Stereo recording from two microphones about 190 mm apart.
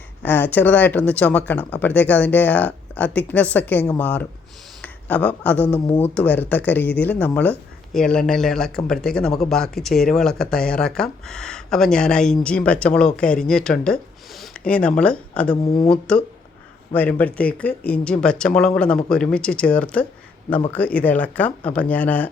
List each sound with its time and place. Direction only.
0.2 s speech: 10° left (ahead or behind)
15.6 s speech: 20° left (ahead or behind)
15.9 s speech: 5° left (ahead or behind)